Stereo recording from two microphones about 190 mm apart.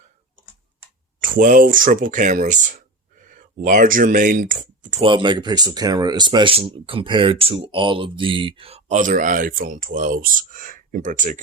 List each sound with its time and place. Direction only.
1.2 s speech: 45° right (ahead or behind)
5.0 s speech: 25° right (ahead or behind); by 11.3 s 40° right (ahead or behind)